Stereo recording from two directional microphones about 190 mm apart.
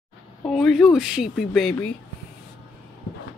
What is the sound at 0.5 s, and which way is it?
Speech, 5° left (ahead or behind).